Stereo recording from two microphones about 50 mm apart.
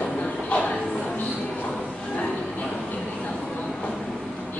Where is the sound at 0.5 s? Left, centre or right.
Left.